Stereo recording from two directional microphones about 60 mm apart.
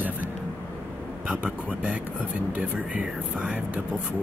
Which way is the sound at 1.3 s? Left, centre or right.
Right.